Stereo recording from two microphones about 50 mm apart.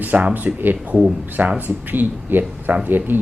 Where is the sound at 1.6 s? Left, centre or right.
Right.